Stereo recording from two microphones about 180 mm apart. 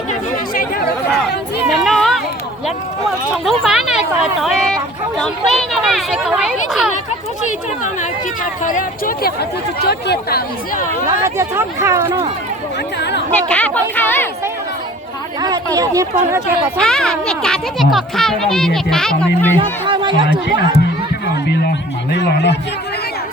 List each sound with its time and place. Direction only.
0.1 s chatter: 50° left (ahead or behind)
1.7 s a sound: centre (ahead or behind)
3.3 s a sound: 5° right (ahead or behind)
8.6 s speech: 50° left (ahead or behind)
11.2 s speech: 15° right (ahead or behind)
13.0 s speech: 70° left (ahead or behind)
13.5 s speech: 10° left (ahead or behind)
15.4 s speech: 20° right (ahead or behind)
16.7 s speech: 5° left (ahead or behind)
19.5 s speech: 25° right (ahead or behind)
22.1 s speech: 75° left (ahead or behind)